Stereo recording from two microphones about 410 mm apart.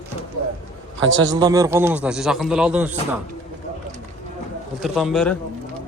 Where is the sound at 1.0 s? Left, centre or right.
Right.